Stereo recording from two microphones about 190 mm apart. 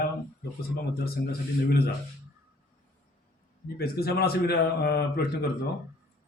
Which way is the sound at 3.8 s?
55° left (ahead or behind).